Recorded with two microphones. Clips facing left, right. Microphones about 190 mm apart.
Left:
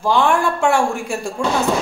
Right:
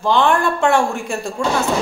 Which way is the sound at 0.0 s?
10° left (ahead or behind).